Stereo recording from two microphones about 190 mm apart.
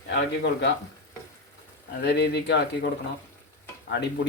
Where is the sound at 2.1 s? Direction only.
60° left (ahead or behind).